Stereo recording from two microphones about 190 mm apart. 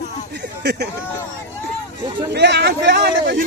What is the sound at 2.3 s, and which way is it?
A man's voice, 60° right (ahead or behind).